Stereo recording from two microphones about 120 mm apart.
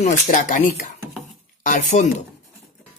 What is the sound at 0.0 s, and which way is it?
Speech, 90° left.